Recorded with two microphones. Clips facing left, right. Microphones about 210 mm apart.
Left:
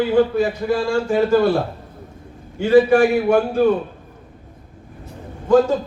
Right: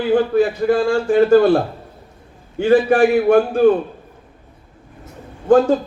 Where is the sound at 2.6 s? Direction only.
50° right (ahead or behind).